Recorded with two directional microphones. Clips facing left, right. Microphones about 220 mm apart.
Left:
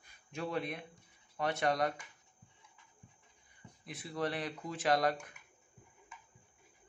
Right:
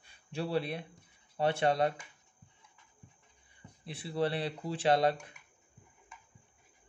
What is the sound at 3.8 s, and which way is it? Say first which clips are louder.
Speech: right 5 dB; 30° right (ahead or behind).